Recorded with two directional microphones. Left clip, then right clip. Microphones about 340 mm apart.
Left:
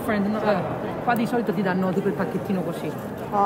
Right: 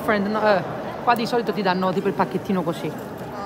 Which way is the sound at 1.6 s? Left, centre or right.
Centre.